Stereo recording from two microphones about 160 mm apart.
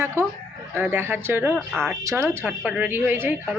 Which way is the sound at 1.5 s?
Centre (ahead or behind).